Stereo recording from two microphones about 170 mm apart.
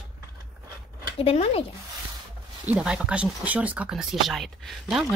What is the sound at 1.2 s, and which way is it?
Speech, 35° left (ahead or behind).